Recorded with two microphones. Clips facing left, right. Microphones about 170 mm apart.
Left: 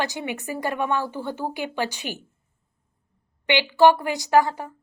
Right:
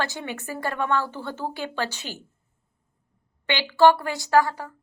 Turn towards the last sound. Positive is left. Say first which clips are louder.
# left 1 dB
turn(degrees=20)  # may be behind; listen again after turning